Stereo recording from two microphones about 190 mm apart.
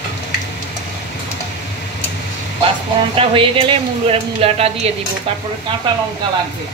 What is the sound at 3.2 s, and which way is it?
Speech, 25° right (ahead or behind).